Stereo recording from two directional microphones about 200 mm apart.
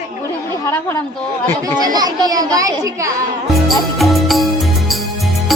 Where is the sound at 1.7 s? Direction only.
20° right (ahead or behind).